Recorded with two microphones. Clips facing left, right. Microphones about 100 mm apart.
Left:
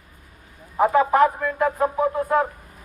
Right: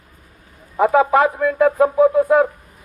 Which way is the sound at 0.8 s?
90° right.